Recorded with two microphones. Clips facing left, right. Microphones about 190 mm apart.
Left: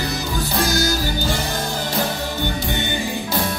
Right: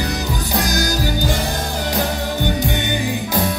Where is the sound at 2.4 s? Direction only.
15° right (ahead or behind).